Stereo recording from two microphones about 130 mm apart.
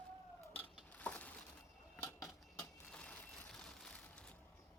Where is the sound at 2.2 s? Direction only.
5° left (ahead or behind).